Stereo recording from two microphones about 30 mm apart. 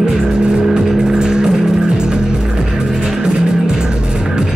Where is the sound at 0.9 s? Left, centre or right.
Right.